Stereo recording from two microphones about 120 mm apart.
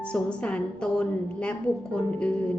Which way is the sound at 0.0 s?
10° left (ahead or behind).